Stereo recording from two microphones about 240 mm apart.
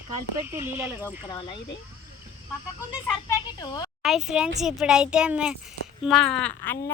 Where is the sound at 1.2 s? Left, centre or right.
Centre.